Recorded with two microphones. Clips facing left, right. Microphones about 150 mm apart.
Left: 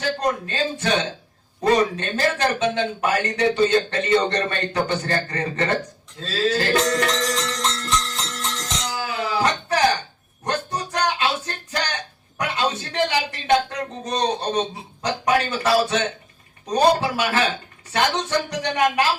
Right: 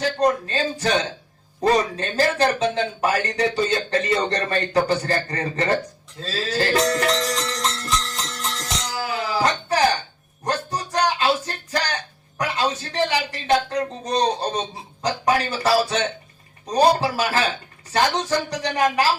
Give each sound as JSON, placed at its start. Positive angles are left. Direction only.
{"t": 0.2, "sound": "speech", "side_deg": -30}
{"t": 7.7, "sound": "music", "side_deg": -30}
{"t": 9.0, "sound": "a sound", "side_deg": -35}
{"t": 11.7, "sound": "music", "side_deg": -35}
{"t": 12.4, "sound": "speech", "side_deg": -35}
{"t": 16.7, "sound": "speech", "side_deg": -35}